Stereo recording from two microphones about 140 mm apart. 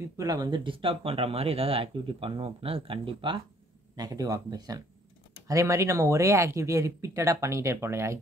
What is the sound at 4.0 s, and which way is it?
Speech, 25° right (ahead or behind).